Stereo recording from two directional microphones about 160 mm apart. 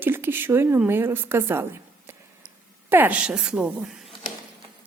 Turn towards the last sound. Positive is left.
turn(degrees=-5)  # may be behind; listen again after turning